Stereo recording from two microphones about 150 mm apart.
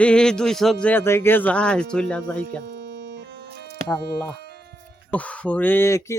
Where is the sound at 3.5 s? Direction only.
90° right.